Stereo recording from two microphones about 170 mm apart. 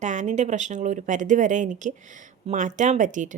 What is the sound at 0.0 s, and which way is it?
A woman's voice, 45° right (ahead or behind).